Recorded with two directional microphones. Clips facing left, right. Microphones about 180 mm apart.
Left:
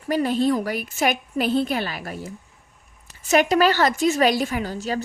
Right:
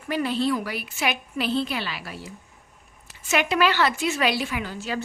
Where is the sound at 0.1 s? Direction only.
45° left (ahead or behind).